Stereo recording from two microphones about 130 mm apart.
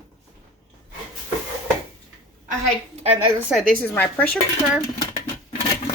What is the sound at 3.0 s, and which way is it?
Speech, 50° right (ahead or behind).